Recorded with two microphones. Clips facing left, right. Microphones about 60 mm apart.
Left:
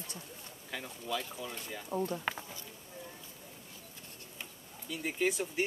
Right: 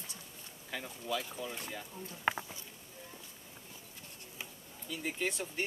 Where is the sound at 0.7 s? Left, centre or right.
Centre.